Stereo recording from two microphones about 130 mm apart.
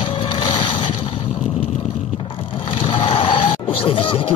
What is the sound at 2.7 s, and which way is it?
Music, 40° left (ahead or behind).